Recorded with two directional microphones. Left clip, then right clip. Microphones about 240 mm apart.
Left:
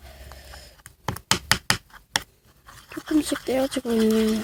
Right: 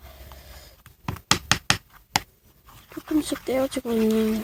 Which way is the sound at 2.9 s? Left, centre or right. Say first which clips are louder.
Left 2 dB; centre.